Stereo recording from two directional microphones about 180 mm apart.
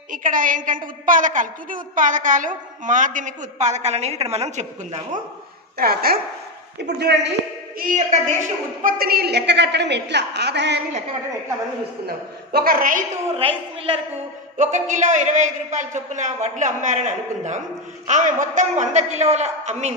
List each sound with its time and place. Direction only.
0.1 s a woman's voice: 50° right (ahead or behind)
5.8 s speech: 60° right (ahead or behind)
7.0 s a woman's voice: 70° right (ahead or behind)
7.8 s a woman's voice: 45° right (ahead or behind); by 10.8 s 70° right (ahead or behind)
12.5 s a woman's voice: 55° right (ahead or behind)
13.4 s a man's voice: 30° right (ahead or behind)
14.6 s a woman's voice: 45° right (ahead or behind)